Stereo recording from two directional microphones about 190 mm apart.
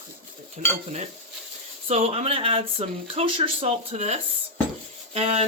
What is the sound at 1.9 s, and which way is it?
Speech, 35° right (ahead or behind).